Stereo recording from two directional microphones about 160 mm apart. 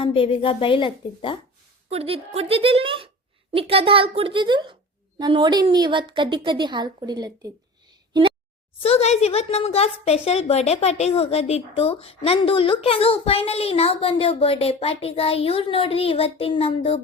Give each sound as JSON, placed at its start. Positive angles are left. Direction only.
{"t": 0.0, "sound": "a woman's voice", "side_deg": 35}
{"t": 1.9, "sound": "a woman's voice", "side_deg": -40}
{"t": 8.8, "sound": "a woman's voice", "side_deg": 40}